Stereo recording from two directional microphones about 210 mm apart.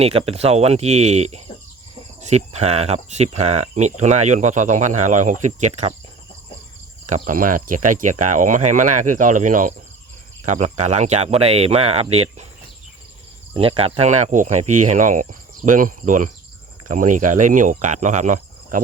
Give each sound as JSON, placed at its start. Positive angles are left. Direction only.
{"t": 0.0, "sound": "speech", "side_deg": -30}
{"t": 7.1, "sound": "speech", "side_deg": -40}
{"t": 13.6, "sound": "speech", "side_deg": -25}
{"t": 14.6, "sound": "speech", "side_deg": -90}
{"t": 14.8, "sound": "speech", "side_deg": -35}